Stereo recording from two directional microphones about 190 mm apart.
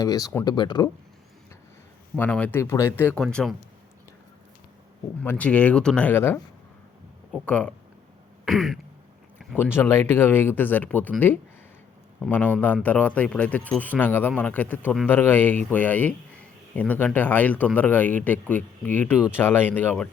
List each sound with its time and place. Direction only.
0.0 s speech: 20° left (ahead or behind)
2.1 s speech: 10° left (ahead or behind)
5.2 s speech: 10° left (ahead or behind)